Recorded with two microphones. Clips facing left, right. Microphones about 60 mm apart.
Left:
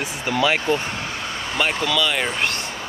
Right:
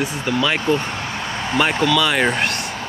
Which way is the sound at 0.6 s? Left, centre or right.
Centre.